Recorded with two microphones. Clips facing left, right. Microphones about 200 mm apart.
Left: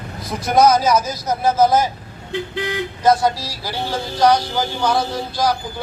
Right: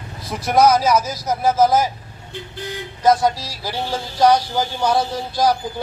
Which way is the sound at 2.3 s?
90° left.